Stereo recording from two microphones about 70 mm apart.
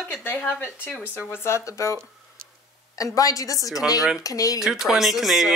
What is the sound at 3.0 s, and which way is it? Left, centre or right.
A woman's voice, left.